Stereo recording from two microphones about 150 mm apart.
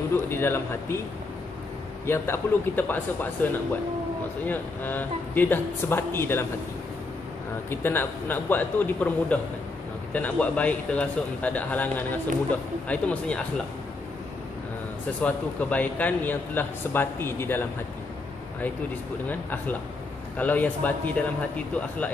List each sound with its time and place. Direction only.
0.1 s a man's voice: 15° left (ahead or behind)
2.0 s a man's voice: 15° left (ahead or behind)
4.5 s a man's voice: 10° left (ahead or behind)
7.7 s a man's voice: 15° left (ahead or behind)
15.2 s a man's voice: 10° left (ahead or behind)
20.3 s a man's voice: 10° left (ahead or behind)